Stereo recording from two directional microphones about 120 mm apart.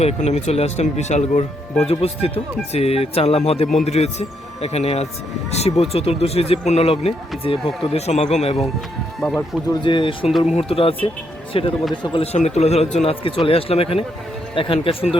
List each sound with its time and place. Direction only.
0.0 s speech: 65° left (ahead or behind)
1.8 s speech: 55° left (ahead or behind)
9.8 s speech: 45° left (ahead or behind)
10.4 s speech: 60° left (ahead or behind)